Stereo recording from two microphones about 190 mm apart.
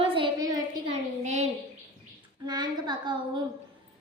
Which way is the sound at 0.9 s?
35° right (ahead or behind).